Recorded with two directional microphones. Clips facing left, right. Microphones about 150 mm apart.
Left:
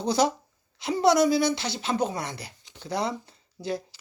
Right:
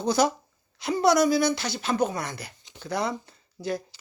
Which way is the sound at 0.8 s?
25° left (ahead or behind).